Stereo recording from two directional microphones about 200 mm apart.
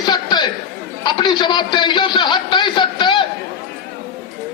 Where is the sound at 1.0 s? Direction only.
20° left (ahead or behind).